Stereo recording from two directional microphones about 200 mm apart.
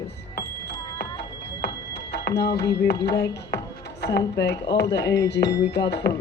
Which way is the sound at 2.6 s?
55° left (ahead or behind).